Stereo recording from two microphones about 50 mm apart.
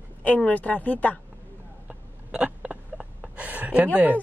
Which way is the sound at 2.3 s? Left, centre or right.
Right.